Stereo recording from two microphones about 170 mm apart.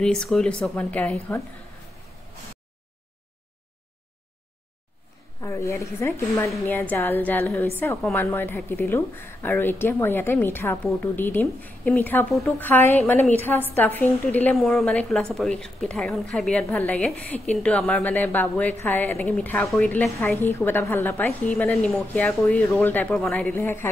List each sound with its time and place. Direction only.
0.0 s a woman's voice: 5° left (ahead or behind)
5.4 s a woman's voice: 20° left (ahead or behind)